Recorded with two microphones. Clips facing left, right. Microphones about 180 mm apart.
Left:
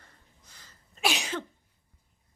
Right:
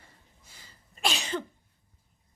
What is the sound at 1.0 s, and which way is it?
Cough, 10° left (ahead or behind).